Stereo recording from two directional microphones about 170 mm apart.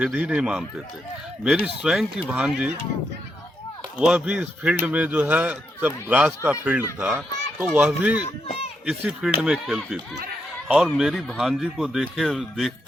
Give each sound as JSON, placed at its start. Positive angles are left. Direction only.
{"t": 0.0, "sound": "speech", "side_deg": -5}
{"t": 3.9, "sound": "speech", "side_deg": -5}
{"t": 8.4, "sound": "speech", "side_deg": 35}
{"t": 8.9, "sound": "speech", "side_deg": 0}